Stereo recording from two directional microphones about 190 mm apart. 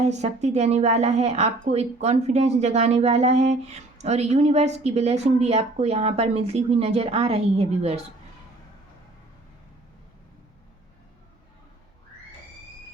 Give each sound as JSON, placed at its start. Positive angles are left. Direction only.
{"t": 0.0, "sound": "speech", "side_deg": -35}